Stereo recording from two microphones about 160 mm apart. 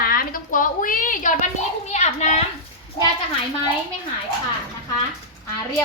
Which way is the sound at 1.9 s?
45° left (ahead or behind).